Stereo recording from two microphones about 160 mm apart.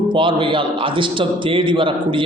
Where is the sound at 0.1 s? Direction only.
30° right (ahead or behind).